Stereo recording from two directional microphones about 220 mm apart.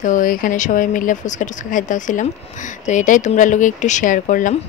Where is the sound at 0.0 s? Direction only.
35° left (ahead or behind).